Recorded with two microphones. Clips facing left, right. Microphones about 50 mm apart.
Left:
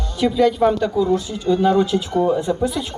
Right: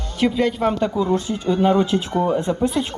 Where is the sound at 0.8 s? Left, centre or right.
Right.